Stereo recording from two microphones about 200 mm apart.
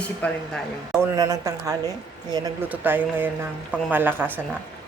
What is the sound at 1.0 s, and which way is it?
Speech, 15° right (ahead or behind).